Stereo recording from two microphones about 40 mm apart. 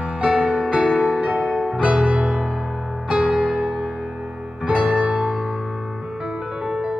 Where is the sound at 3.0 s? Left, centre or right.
Right; by 4.6 s centre.